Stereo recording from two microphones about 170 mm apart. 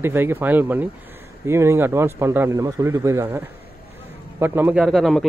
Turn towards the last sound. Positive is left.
turn(degrees=0)  # may be behind; listen again after turning